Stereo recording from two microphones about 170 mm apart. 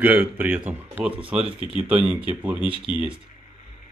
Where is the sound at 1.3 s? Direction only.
35° right (ahead or behind).